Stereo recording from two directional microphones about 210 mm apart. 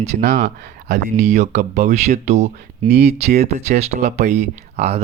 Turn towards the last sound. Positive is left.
turn(degrees=-30)  # may be behind; listen again after turning